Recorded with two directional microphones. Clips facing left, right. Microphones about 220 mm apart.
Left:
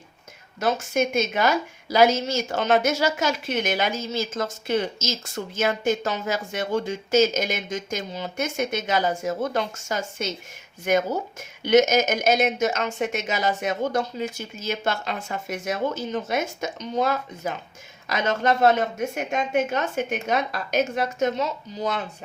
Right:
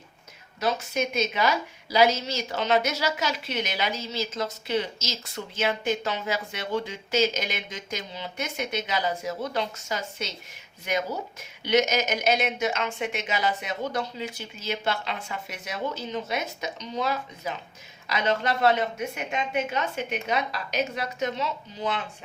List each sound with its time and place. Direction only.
0.6 s a woman's voice: 50° left (ahead or behind)